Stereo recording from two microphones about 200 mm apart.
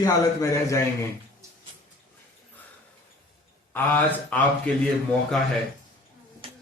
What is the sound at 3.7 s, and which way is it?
A man's voice, 10° left (ahead or behind).